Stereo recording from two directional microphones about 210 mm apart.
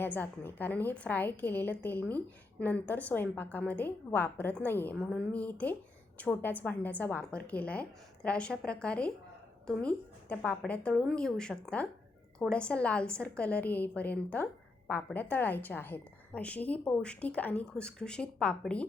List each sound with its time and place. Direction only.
0.0 s a woman's voice: 10° left (ahead or behind)